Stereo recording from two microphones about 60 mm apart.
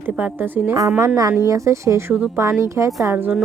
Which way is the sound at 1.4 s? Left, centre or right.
Right.